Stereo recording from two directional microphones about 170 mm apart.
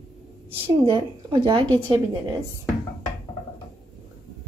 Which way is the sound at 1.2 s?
25° right (ahead or behind).